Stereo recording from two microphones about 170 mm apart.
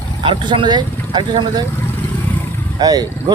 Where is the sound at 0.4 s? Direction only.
25° right (ahead or behind).